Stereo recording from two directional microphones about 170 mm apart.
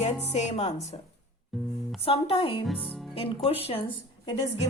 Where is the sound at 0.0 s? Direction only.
40° left (ahead or behind).